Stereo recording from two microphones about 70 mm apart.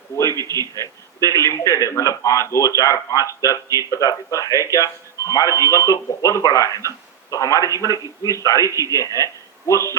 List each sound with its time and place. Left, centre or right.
0.3 s a man's voice: right
0.8 s speech: left
7.9 s a man's voice: left
8.4 s speech: left